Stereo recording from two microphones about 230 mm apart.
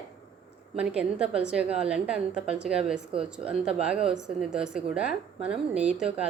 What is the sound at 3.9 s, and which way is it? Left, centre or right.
Speech, right.